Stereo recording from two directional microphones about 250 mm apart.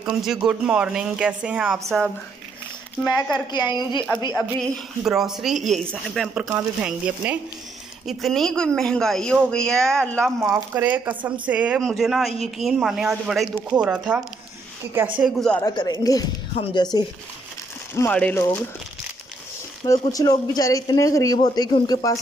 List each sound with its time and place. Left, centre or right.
0.0 s speech: centre
4.4 s speech: centre
15.6 s speech: centre
19.8 s speech: centre